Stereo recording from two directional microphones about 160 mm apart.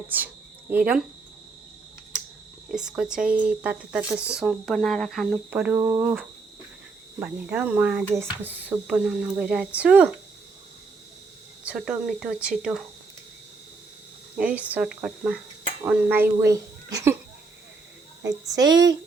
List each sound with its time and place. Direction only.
0.7 s speech: 10° right (ahead or behind)
2.6 s speech: 5° right (ahead or behind)
7.2 s speech: 10° right (ahead or behind)
11.6 s speech: 5° right (ahead or behind)
14.3 s speech: 10° right (ahead or behind)
18.2 s a woman's voice: 20° right (ahead or behind)